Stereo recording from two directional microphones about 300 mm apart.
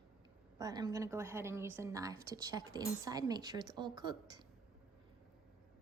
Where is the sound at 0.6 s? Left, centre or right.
Centre.